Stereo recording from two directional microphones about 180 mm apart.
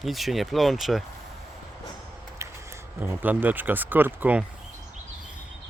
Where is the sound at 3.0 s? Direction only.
10° right (ahead or behind).